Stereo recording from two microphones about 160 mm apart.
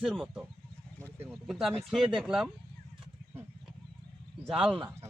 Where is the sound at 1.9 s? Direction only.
5° right (ahead or behind).